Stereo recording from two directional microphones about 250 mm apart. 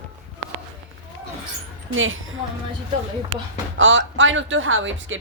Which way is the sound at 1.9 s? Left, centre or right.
Right.